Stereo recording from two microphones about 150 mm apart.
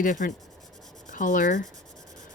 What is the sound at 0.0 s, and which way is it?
Speech, 60° left (ahead or behind).